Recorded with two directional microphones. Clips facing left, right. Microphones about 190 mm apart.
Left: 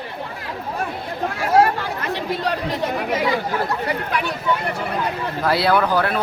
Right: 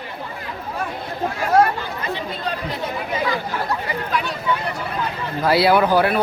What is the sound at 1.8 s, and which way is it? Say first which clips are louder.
Chatter: left 2 dB; 70° left (ahead or behind).